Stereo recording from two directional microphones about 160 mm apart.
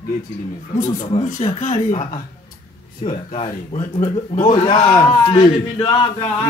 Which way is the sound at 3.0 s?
40° left (ahead or behind).